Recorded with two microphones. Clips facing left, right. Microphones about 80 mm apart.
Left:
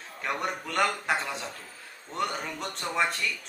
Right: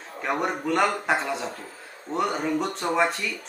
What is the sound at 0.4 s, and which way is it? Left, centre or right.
Speech, centre.